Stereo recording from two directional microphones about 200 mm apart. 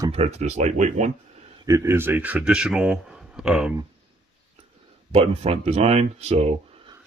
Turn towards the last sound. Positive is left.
turn(degrees=-30)  # may be behind; listen again after turning